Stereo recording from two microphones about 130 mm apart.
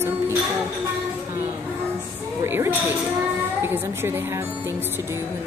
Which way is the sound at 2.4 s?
15° right (ahead or behind).